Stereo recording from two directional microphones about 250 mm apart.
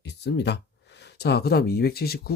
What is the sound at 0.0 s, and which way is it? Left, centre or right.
Speech, left.